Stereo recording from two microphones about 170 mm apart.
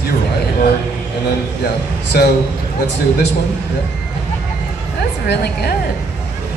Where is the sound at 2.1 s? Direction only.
65° left (ahead or behind).